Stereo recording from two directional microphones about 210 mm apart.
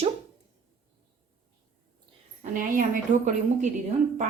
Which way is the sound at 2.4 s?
40° right (ahead or behind).